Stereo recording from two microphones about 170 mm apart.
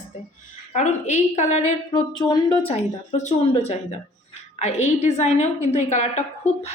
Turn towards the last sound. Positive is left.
turn(degrees=10)  # may be behind; listen again after turning